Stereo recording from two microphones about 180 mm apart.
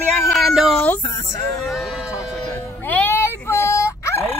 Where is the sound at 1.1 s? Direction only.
15° left (ahead or behind).